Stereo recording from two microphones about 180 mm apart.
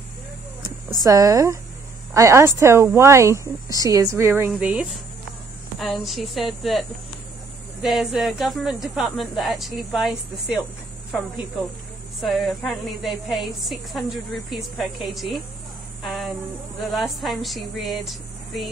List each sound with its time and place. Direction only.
1.0 s a woman's voice: 20° right (ahead or behind); by 10.6 s centre (ahead or behind)
12.2 s a woman's voice: centre (ahead or behind)
16.0 s a sound: centre (ahead or behind)
16.9 s a woman's voice: centre (ahead or behind)